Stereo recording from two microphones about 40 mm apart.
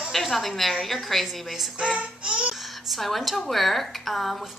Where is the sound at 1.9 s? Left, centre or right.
Right.